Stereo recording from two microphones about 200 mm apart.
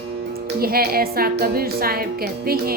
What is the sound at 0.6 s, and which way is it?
Speech, 50° right (ahead or behind).